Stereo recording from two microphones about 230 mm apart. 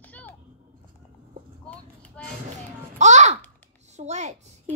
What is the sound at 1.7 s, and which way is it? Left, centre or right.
Vehicle, centre.